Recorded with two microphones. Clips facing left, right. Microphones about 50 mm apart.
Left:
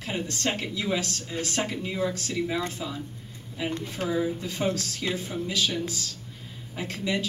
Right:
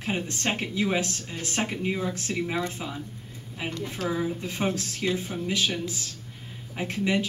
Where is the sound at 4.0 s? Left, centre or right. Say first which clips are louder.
Even; left.